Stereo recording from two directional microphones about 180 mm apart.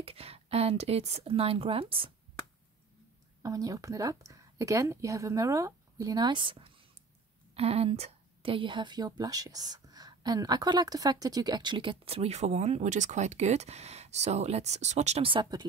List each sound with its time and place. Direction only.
0.0 s a woman's voice: 35° right (ahead or behind)
3.4 s a woman's voice: 20° right (ahead or behind)